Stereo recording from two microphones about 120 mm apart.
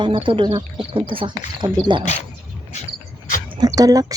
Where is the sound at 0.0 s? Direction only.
45° right (ahead or behind).